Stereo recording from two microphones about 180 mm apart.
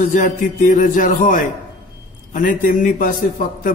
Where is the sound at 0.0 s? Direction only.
45° left (ahead or behind).